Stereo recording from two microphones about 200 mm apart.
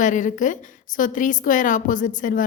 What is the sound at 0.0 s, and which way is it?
A woman's voice, 40° left (ahead or behind).